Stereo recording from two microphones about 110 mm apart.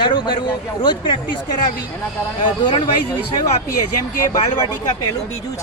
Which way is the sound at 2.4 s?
45° left (ahead or behind).